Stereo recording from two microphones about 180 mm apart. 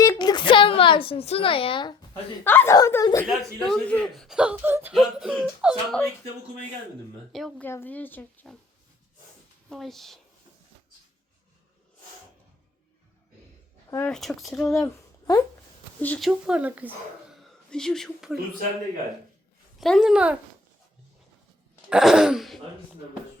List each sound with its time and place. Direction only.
0.0 s a sound: 20° left (ahead or behind)
2.4 s speech: 10° left (ahead or behind)
3.2 s speech: 5° left (ahead or behind)
7.3 s speech: centre (ahead or behind)
9.6 s speech: centre (ahead or behind)
14.1 s speech: centre (ahead or behind)
14.7 s speech: 15° left (ahead or behind)
16.5 s speech: 5° right (ahead or behind)
17.7 s speech: 5° left (ahead or behind)
19.8 s speech: centre (ahead or behind)
21.8 s speech: 5° right (ahead or behind)